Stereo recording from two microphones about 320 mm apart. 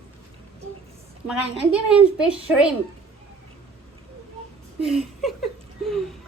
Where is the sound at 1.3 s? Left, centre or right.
Centre.